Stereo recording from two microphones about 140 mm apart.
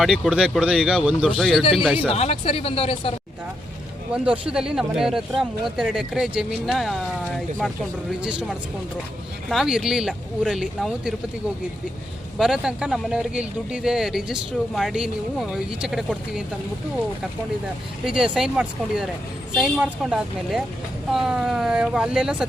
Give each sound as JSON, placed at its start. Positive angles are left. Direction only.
{"t": 0.0, "sound": "speech", "side_deg": 0}
{"t": 2.0, "sound": "speech", "side_deg": 50}
{"t": 4.1, "sound": "speech", "side_deg": -5}
{"t": 12.4, "sound": "speech", "side_deg": -5}
{"t": 18.0, "sound": "speech", "side_deg": -5}